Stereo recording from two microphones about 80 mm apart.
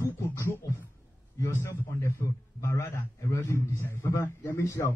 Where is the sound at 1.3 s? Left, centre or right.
Left.